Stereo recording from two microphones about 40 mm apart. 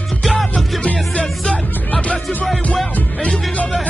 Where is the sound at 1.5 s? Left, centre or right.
Left.